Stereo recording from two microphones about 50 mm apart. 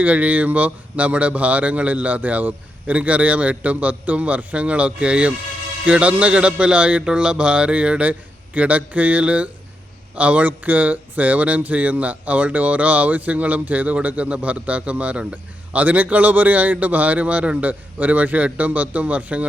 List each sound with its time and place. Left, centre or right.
0.0 s speech: right